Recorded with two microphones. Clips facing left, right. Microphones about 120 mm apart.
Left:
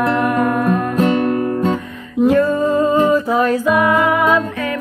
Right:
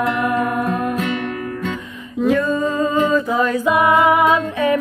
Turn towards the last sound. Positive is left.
turn(degrees=-15)  # may be behind; listen again after turning